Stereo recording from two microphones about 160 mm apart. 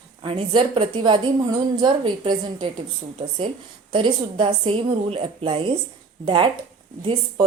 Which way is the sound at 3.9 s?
30° right (ahead or behind).